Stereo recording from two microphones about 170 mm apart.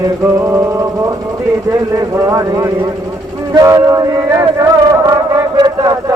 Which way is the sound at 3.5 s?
20° right (ahead or behind).